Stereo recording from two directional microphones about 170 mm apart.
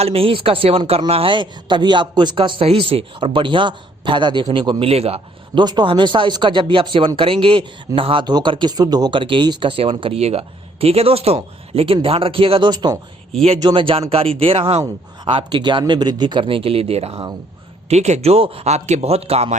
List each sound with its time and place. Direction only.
0.0 s a man's voice: 35° right (ahead or behind)